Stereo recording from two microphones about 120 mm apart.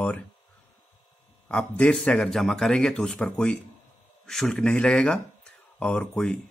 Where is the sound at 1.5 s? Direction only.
10° left (ahead or behind).